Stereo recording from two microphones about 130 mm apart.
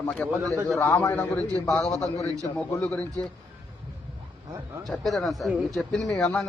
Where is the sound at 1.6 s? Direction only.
25° left (ahead or behind).